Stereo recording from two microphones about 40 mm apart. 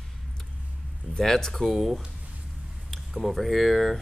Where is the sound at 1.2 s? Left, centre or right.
Centre.